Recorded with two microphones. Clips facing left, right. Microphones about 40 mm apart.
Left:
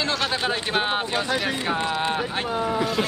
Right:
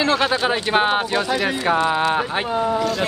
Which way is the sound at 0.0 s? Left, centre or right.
Centre.